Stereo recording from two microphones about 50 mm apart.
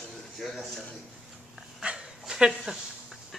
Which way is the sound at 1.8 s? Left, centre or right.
Centre.